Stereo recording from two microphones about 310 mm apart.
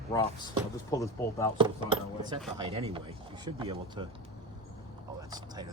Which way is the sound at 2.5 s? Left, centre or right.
Centre.